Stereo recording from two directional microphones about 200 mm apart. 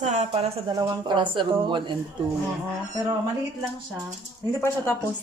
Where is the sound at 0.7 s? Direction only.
20° right (ahead or behind).